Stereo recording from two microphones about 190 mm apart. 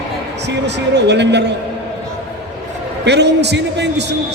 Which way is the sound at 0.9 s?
65° right (ahead or behind).